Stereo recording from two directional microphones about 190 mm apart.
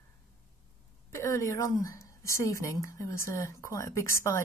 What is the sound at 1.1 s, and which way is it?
A woman's voice, 15° left (ahead or behind).